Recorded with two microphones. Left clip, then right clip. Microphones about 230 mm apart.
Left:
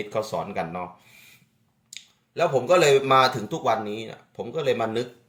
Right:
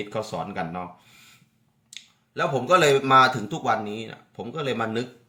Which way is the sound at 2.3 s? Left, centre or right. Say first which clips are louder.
Left 1 dB; centre.